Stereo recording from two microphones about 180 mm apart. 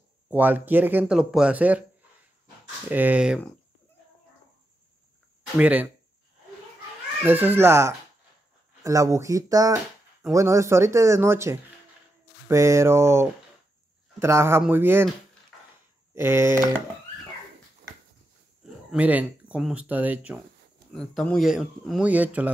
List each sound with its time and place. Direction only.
0.3 s speech: 10° right (ahead or behind)
2.9 s speech: 10° right (ahead or behind)
5.6 s speech: 10° right (ahead or behind)
7.2 s speech: 10° right (ahead or behind)
16.2 s speech: 15° right (ahead or behind)
18.9 s speech: 10° right (ahead or behind)
20.9 s speech: 5° left (ahead or behind)